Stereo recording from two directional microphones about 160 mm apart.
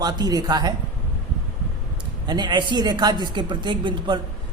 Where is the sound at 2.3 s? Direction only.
25° right (ahead or behind).